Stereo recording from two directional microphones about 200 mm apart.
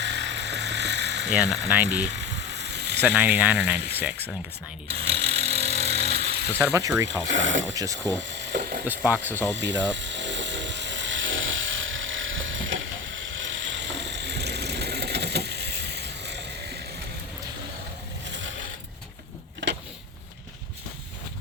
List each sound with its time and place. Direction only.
0.0 s vehicle: 60° right (ahead or behind)
1.3 s speech: 5° right (ahead or behind)
2.1 s a sound: 60° right (ahead or behind)
3.0 s speech: 10° right (ahead or behind)
3.8 s speech: 55° right (ahead or behind)
5.2 s vehicle: 30° right (ahead or behind)
6.6 s speech: 15° right (ahead or behind)
7.3 s speech: 70° right (ahead or behind)
7.7 s speech: 15° right (ahead or behind)
8.4 s ratchet: 55° right (ahead or behind)
9.0 s speech: 10° right (ahead or behind)
9.6 s speech: 65° right (ahead or behind)
9.9 s a sound: 65° right (ahead or behind)
18.3 s coin: 65° right (ahead or behind)